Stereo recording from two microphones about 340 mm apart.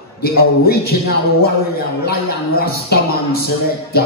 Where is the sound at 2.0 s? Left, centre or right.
Left.